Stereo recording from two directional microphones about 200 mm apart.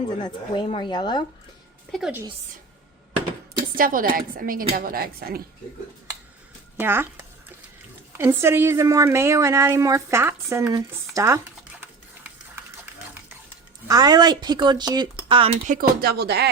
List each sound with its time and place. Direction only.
0.2 s speech: 25° left (ahead or behind)
1.9 s a woman's voice: 5° right (ahead or behind)
3.8 s a woman's voice: 45° right (ahead or behind)
6.7 s a woman's voice: 10° right (ahead or behind)
8.2 s a woman's voice: 10° right (ahead or behind)
13.8 s speech: 20° right (ahead or behind)
15.6 s a woman's voice: 45° right (ahead or behind)